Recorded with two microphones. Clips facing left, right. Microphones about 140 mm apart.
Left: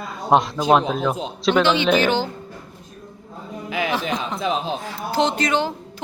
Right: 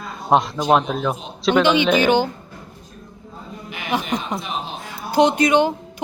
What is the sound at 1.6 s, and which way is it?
Speech, 15° right (ahead or behind).